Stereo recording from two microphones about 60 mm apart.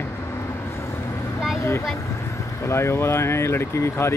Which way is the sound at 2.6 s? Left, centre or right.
Left.